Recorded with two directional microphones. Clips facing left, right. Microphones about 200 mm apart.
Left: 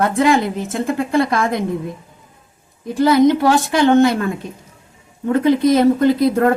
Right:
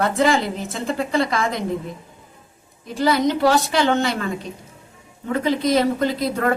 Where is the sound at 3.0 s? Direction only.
55° left (ahead or behind).